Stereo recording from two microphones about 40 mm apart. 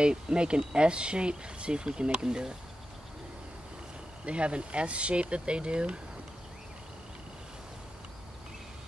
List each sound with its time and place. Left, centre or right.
0.0 s speech: right
4.3 s speech: right